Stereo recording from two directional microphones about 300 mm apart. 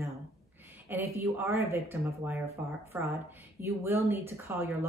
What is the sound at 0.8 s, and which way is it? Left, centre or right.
A woman's voice, centre.